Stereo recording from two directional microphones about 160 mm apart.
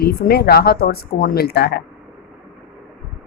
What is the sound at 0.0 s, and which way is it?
Speech, 75° left (ahead or behind).